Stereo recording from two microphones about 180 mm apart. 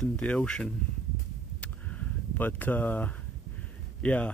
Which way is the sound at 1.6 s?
10° left (ahead or behind).